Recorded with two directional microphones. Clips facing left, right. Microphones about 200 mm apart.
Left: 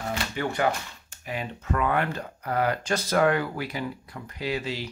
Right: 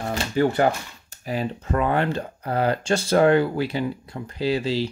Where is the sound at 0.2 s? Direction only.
35° right (ahead or behind).